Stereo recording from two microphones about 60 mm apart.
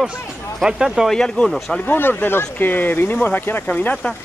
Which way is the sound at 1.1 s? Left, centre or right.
Centre.